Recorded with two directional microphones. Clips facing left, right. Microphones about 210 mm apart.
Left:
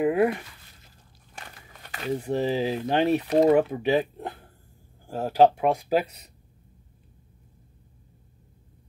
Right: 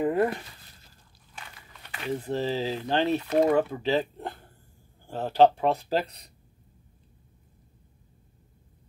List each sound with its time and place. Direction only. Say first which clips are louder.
0.0 s speech: left 3 dB; 10° left (ahead or behind)
1.3 s biting: left 2 dB; 45° left (ahead or behind)
2.1 s speech: left 3 dB; 15° left (ahead or behind)